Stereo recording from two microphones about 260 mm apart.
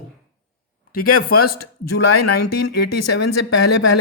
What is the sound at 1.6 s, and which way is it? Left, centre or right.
A man's voice, left.